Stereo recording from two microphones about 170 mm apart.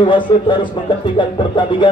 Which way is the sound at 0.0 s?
30° left (ahead or behind).